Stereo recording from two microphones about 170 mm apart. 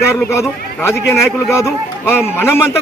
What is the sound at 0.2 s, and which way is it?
A man's voice, 15° left (ahead or behind).